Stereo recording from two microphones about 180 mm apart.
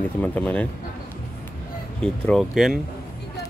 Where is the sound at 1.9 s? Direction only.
5° left (ahead or behind).